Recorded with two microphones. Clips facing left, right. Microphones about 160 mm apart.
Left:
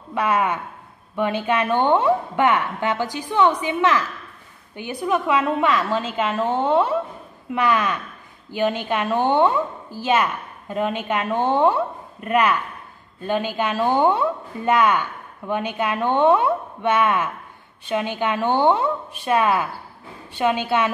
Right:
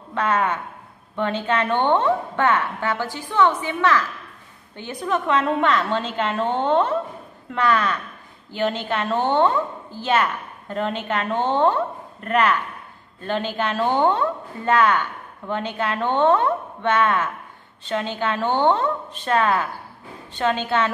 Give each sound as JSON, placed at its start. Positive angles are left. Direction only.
{"t": 0.1, "sound": "a woman's voice", "side_deg": 10}